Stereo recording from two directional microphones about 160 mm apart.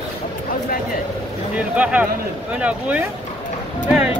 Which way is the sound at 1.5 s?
10° right (ahead or behind).